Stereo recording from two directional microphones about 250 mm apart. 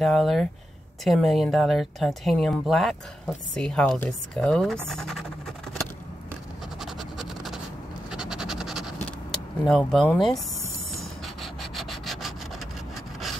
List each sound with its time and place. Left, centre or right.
0.0 s speech: centre
6.8 s a sound: centre
11.0 s rub: centre